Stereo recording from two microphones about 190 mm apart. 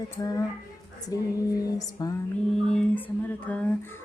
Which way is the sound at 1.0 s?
20° left (ahead or behind).